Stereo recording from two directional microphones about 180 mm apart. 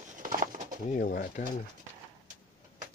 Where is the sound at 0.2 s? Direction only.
50° right (ahead or behind).